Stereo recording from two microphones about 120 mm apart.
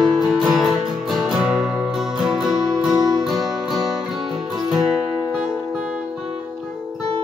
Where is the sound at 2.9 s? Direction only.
35° right (ahead or behind).